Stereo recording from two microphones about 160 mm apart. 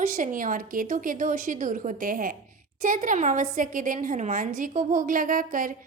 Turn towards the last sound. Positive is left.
turn(degrees=-60)  # may be behind; listen again after turning